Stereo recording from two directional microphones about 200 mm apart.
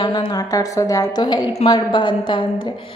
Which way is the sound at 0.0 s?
25° left (ahead or behind).